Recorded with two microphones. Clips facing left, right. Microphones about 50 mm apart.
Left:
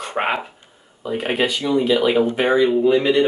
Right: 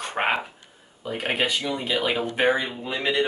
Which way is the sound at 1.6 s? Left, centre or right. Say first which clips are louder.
Left 10 dB; centre.